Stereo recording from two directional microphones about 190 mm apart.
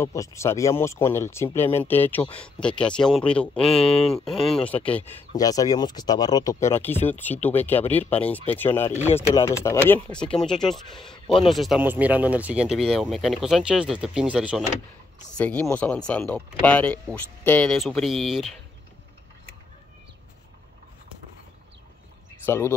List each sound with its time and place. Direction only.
0.0 s speech: 15° left (ahead or behind)
5.3 s speech: 20° left (ahead or behind); by 14.6 s 5° right (ahead or behind)
15.3 s speech: 5° left (ahead or behind)
22.5 s speech: 15° left (ahead or behind)